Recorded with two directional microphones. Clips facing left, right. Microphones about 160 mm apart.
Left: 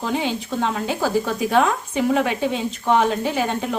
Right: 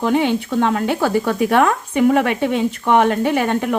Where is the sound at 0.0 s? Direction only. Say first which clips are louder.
Right 7 dB; 60° right (ahead or behind).